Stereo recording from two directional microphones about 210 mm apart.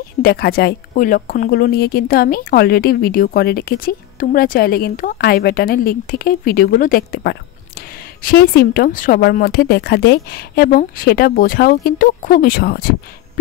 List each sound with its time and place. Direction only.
0.2 s a woman's voice: 45° left (ahead or behind)